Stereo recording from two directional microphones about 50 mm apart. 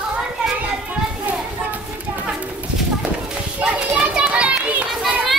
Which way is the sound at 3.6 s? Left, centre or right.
Right.